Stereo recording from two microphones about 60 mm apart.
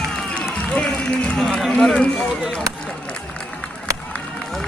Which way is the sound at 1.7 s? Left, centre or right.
Centre.